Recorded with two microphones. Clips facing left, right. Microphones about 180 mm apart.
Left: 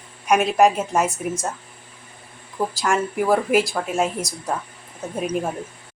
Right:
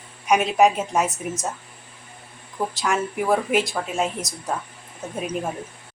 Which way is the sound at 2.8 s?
Centre (ahead or behind).